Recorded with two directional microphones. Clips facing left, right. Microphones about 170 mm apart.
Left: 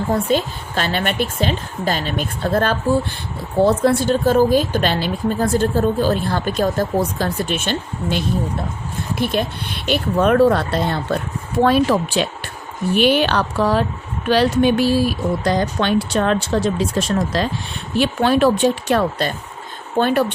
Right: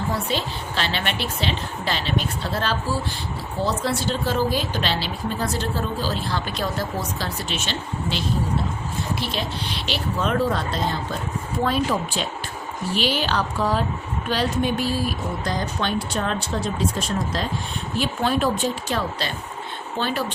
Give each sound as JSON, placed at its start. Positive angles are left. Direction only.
{"t": 0.1, "sound": "a woman's voice", "side_deg": 50}
{"t": 12.9, "sound": "a woman's voice", "side_deg": 55}
{"t": 17.9, "sound": "a woman's voice", "side_deg": 70}